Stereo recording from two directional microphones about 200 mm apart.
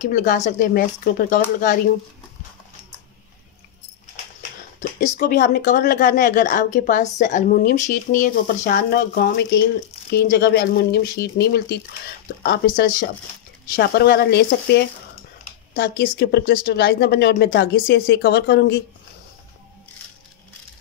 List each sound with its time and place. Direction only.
0.0 s a woman's voice: 40° left (ahead or behind)
4.7 s a sound: 35° left (ahead or behind)
5.2 s a woman's voice: 50° left (ahead or behind)